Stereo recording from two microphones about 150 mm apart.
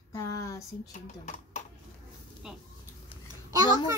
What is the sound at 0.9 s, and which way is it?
Speech, 55° left (ahead or behind).